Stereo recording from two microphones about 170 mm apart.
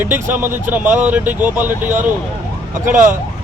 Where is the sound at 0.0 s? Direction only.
10° right (ahead or behind).